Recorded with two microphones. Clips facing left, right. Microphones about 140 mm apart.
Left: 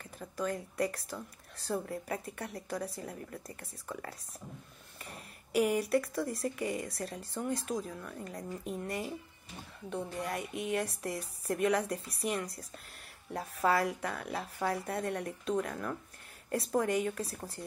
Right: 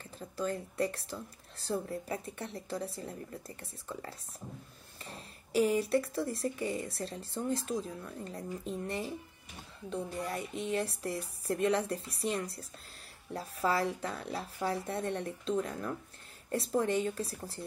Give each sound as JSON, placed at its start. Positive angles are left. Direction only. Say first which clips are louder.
{"t": 0.0, "sound": "a woman's voice", "louder": "even", "side_deg": -30}
{"t": 10.1, "sound": "a woman's voice", "louder": "even", "side_deg": -30}
{"t": 13.7, "sound": "a woman's voice", "louder": "left 1 dB", "side_deg": -30}